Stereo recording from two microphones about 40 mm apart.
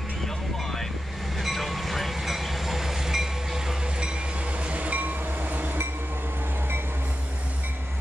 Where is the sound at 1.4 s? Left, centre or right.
Centre.